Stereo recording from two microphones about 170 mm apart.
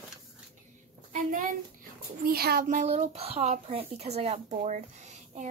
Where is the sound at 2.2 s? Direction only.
65° right (ahead or behind).